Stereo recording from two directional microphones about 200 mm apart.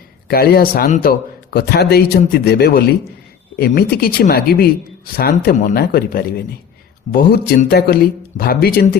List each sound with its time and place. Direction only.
0.3 s speech: 50° left (ahead or behind)